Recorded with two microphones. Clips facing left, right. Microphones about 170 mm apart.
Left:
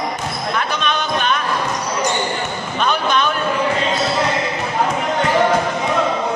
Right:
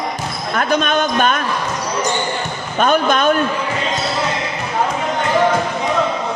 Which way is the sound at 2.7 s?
45° right (ahead or behind).